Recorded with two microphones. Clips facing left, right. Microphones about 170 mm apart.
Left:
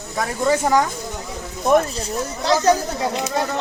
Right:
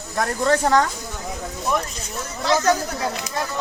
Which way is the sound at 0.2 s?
5° left (ahead or behind).